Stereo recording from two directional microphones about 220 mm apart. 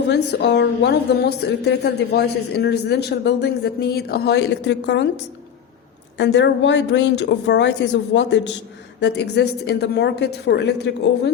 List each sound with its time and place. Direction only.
0.1 s a woman's voice: 50° left (ahead or behind)